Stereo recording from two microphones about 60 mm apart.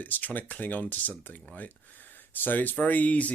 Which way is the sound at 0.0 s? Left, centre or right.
Left.